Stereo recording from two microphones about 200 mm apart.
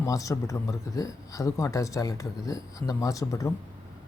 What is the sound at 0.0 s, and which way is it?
Speech, 15° left (ahead or behind).